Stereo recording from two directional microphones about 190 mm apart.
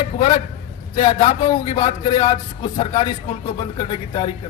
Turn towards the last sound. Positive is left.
turn(degrees=25)  # may be behind; listen again after turning